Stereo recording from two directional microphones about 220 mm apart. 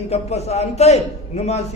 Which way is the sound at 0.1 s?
30° left (ahead or behind).